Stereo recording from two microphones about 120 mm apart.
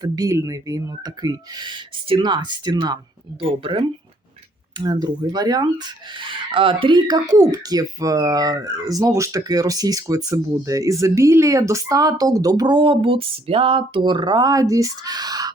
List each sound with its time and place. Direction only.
0.0 s speech: 30° right (ahead or behind)
3.6 s speech: 45° right (ahead or behind)
4.8 s speech: 35° right (ahead or behind)